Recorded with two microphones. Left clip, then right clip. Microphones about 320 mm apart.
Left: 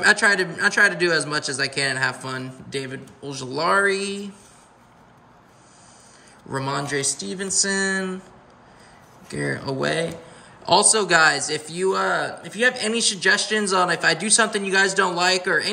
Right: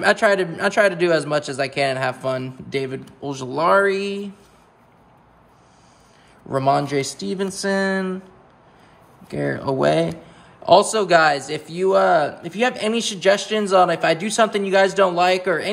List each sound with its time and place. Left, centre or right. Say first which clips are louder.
0.0 s a man's voice: right 1 dB; centre
6.5 s a man's voice: right 7 dB; centre
7.0 s speech: right 2 dB; centre
7.2 s a man's voice: right 1 dB; centre
9.3 s a man's voice: right 4 dB; centre